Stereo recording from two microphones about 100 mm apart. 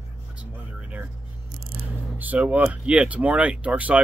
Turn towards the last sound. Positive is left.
turn(degrees=-15)  # may be behind; listen again after turning